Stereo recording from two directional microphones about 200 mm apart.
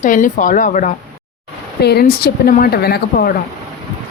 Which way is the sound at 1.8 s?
55° left (ahead or behind).